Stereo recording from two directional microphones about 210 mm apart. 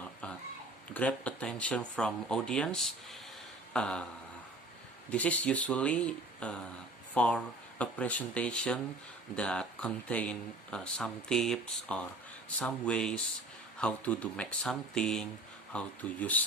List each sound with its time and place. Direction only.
0.9 s speech: 5° left (ahead or behind)
3.7 s a sound: 5° left (ahead or behind)
5.1 s speech: 5° left (ahead or behind)